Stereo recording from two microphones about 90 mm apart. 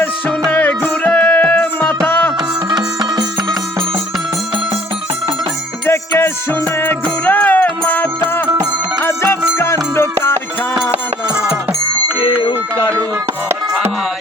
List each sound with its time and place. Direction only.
0.7 s music: 15° left (ahead or behind)
2.6 s music: 50° right (ahead or behind)
5.9 s music: 25° left (ahead or behind)
9.0 s music: 25° left (ahead or behind)
12.2 s music: 70° left (ahead or behind)